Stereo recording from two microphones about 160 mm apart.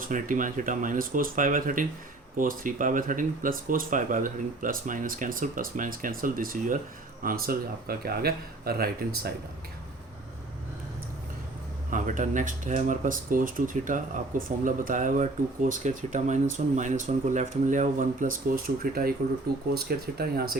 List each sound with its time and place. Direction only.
0.0 s speech: 55° right (ahead or behind)
11.9 s speech: 55° right (ahead or behind)
19.7 s speech: 75° right (ahead or behind)